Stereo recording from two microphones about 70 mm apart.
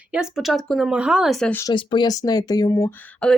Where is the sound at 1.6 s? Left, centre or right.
Left.